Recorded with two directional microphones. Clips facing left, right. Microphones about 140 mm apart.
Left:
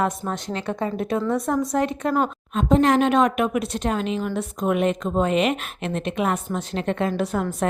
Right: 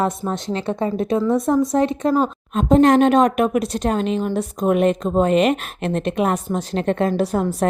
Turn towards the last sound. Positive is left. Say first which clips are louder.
# right 4 dB
turn(degrees=-35)  # may be behind; listen again after turning